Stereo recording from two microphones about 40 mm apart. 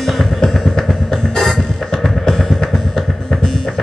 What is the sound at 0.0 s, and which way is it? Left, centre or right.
Music, centre.